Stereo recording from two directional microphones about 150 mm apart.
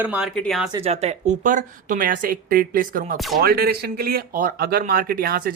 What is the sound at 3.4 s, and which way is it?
Speech, 90° right.